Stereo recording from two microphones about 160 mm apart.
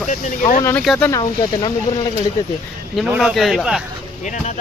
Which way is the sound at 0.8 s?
Centre (ahead or behind).